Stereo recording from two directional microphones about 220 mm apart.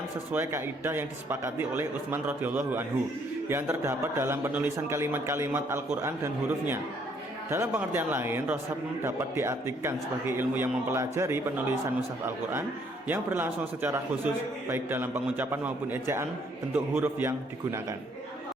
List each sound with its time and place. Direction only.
0.3 s a man's voice: 10° right (ahead or behind)